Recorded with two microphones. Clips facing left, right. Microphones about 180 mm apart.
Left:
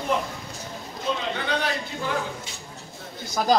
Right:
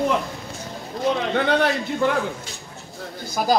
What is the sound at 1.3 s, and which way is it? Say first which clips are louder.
Speech: right 7 dB; 60° right (ahead or behind).